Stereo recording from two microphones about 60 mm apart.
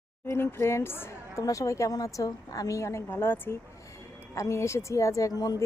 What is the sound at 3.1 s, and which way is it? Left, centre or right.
Speech, left.